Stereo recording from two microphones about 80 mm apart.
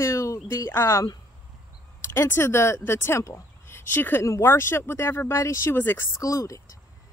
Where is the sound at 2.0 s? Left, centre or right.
Left.